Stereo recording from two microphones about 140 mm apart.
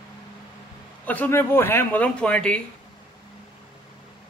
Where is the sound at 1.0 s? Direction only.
10° left (ahead or behind).